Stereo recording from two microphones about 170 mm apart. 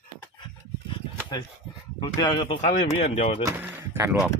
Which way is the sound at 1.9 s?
25° left (ahead or behind).